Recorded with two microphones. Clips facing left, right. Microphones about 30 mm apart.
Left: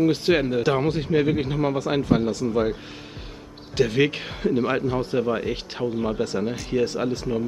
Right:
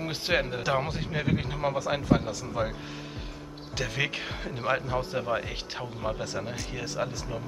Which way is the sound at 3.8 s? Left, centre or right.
Centre.